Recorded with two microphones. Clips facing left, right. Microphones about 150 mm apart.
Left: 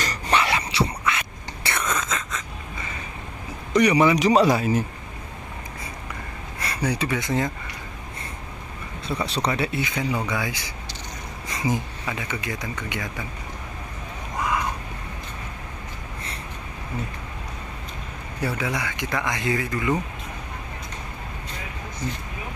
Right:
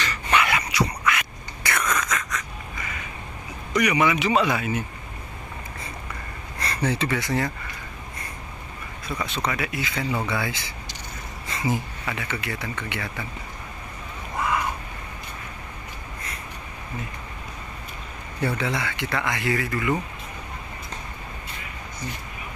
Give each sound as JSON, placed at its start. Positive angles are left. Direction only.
{"t": 0.0, "sound": "whispering", "side_deg": 35}
{"t": 3.7, "sound": "speech", "side_deg": 30}
{"t": 6.6, "sound": "speech", "side_deg": 10}
{"t": 9.0, "sound": "speech", "side_deg": 30}
{"t": 14.3, "sound": "a sound", "side_deg": 15}
{"t": 18.4, "sound": "speech", "side_deg": 10}